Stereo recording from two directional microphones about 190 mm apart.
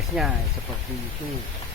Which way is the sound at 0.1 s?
5° right (ahead or behind).